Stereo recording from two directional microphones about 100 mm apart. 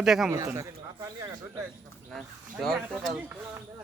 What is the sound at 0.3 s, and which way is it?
Speech, 30° right (ahead or behind).